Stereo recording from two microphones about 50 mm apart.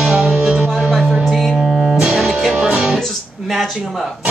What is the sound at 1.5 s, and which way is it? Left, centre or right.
Music, centre.